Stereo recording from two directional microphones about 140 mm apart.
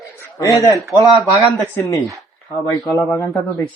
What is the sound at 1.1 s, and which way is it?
Speech, centre (ahead or behind).